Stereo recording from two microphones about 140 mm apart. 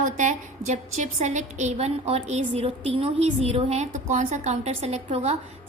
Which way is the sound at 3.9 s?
60° right (ahead or behind).